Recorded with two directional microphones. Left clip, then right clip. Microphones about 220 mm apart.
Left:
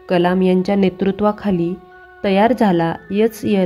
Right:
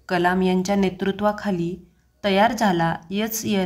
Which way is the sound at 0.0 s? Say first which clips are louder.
Left 5 dB; 30° left (ahead or behind).